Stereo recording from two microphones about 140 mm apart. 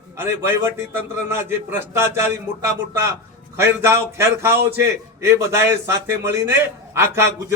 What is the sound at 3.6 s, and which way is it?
Speech, 20° right (ahead or behind).